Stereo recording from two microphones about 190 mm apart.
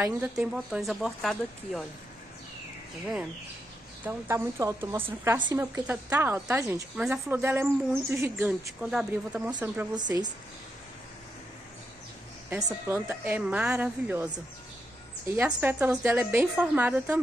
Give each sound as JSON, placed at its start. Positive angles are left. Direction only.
{"t": 0.0, "sound": "speech", "side_deg": -10}
{"t": 4.0, "sound": "a woman's voice", "side_deg": -10}
{"t": 9.9, "sound": "a woman's voice", "side_deg": -20}
{"t": 12.4, "sound": "a woman's voice", "side_deg": -15}